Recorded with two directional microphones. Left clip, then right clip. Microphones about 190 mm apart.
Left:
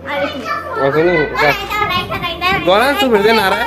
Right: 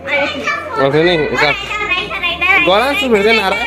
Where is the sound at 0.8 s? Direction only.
25° right (ahead or behind).